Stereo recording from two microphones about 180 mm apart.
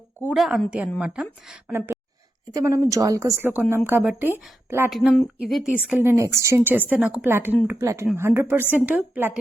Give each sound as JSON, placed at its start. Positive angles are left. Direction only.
{"t": 0.3, "sound": "a woman's voice", "side_deg": 0}